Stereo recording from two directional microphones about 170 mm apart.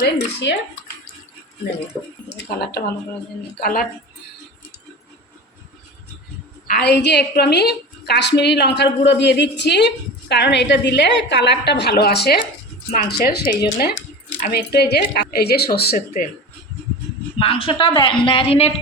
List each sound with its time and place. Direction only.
0.0 s a woman's voice: 80° left
2.4 s speech: 70° left (ahead or behind)
3.6 s speech: 55° left (ahead or behind)
6.7 s a woman's voice: 70° left (ahead or behind)
17.3 s a woman's voice: 35° left (ahead or behind)